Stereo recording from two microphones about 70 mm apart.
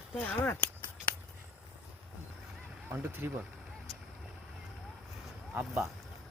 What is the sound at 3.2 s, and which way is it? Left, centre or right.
Speech, right.